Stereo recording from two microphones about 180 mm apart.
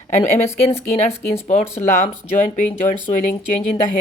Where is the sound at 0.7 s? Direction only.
35° left (ahead or behind).